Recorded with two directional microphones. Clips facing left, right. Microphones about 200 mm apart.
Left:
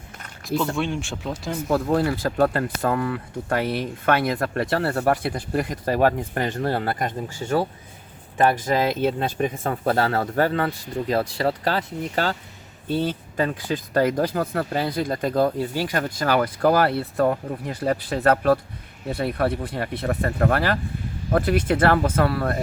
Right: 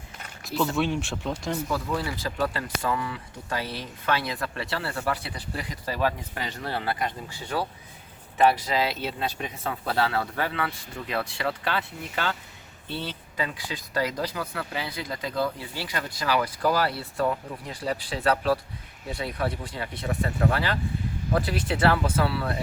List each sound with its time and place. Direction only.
0.4 s speech: centre (ahead or behind)
1.6 s speech: 55° left (ahead or behind)